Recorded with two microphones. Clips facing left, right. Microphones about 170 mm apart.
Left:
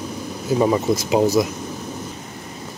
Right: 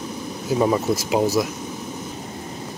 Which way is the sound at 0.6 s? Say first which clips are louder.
Left 2 dB; centre (ahead or behind).